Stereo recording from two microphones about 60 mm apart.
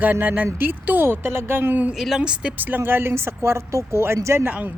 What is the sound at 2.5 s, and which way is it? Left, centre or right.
Speech, right.